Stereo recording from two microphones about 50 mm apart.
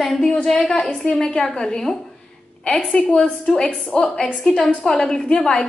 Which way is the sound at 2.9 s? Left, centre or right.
Centre.